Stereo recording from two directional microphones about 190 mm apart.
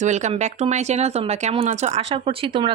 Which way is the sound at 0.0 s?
40° right (ahead or behind).